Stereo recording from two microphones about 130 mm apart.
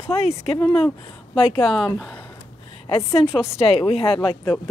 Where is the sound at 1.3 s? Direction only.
45° left (ahead or behind).